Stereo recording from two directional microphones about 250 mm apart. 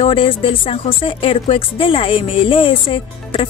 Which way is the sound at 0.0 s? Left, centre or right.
Left.